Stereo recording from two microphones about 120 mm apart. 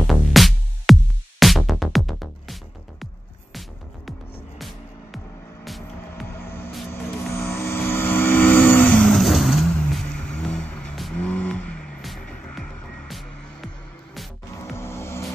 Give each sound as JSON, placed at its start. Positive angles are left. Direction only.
{"t": 0.0, "sound": "music", "side_deg": 0}
{"t": 4.6, "sound": "music", "side_deg": 0}
{"t": 6.3, "sound": "vehicle", "side_deg": 20}
{"t": 9.1, "sound": "vehicle", "side_deg": 0}
{"t": 11.1, "sound": "music", "side_deg": 10}
{"t": 14.8, "sound": "vehicle", "side_deg": 20}